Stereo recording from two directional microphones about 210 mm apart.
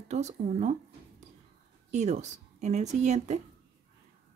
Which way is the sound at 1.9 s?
35° right (ahead or behind).